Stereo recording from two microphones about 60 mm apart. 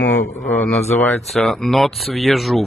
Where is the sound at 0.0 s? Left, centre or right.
Left.